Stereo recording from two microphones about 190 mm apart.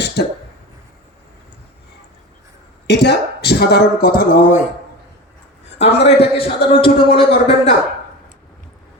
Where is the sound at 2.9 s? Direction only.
60° left (ahead or behind).